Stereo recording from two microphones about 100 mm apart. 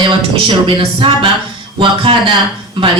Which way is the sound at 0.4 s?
60° right (ahead or behind).